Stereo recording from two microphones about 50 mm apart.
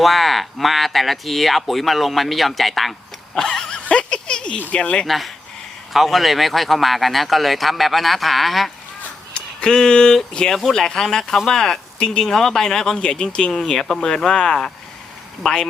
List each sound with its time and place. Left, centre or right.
0.0 s speech: centre
3.3 s a sound: centre
3.8 s a sound: centre
4.7 s speech: left
5.0 s speech: centre
9.3 s speech: centre